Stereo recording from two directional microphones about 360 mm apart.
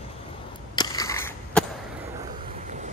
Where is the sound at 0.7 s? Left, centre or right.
Centre.